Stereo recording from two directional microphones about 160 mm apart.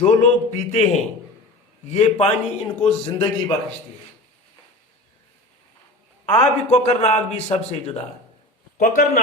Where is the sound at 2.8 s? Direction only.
25° left (ahead or behind).